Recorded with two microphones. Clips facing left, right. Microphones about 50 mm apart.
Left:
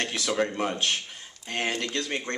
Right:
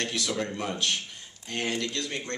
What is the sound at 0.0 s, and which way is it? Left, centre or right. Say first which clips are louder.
A man's voice: left 3 dB; left.